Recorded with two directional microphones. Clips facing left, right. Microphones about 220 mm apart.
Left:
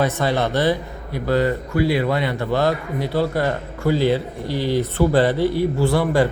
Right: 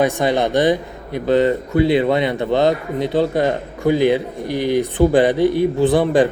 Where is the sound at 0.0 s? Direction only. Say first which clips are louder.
Right 3 dB; 15° right (ahead or behind).